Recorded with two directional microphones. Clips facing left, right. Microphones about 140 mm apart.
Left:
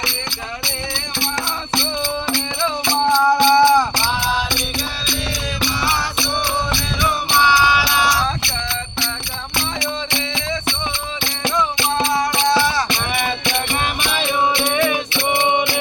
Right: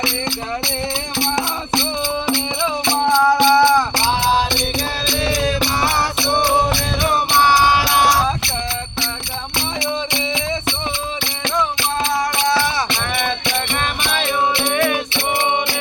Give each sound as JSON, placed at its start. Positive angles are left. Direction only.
{"t": 1.7, "sound": "music", "side_deg": -15}
{"t": 4.2, "sound": "music", "side_deg": -35}
{"t": 5.3, "sound": "music", "side_deg": -50}
{"t": 6.7, "sound": "music", "side_deg": -45}
{"t": 9.8, "sound": "music", "side_deg": -20}
{"t": 11.4, "sound": "music", "side_deg": 10}
{"t": 13.2, "sound": "music", "side_deg": 5}